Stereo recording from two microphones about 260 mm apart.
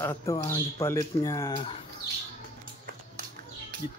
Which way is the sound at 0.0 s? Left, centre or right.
Centre.